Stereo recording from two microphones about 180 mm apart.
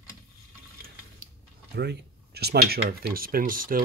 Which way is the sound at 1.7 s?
65° right (ahead or behind).